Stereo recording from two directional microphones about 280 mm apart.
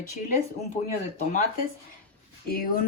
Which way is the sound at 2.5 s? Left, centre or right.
Left.